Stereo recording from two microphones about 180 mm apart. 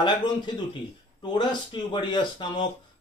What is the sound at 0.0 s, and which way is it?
Speech, 25° left (ahead or behind).